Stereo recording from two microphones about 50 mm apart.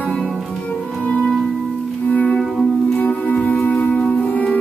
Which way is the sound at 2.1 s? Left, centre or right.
Left.